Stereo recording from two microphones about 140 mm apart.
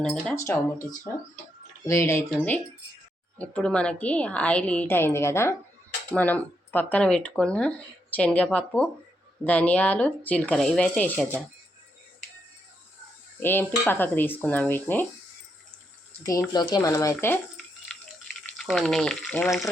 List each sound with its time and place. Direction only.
0.0 s speech: 10° left (ahead or behind)
0.3 s speech: 20° left (ahead or behind); by 11.3 s 5° left (ahead or behind)
13.4 s speech: 15° left (ahead or behind)
16.2 s speech: 25° left (ahead or behind)
17.9 s water: 5° left (ahead or behind)
18.5 s speech: 5° left (ahead or behind)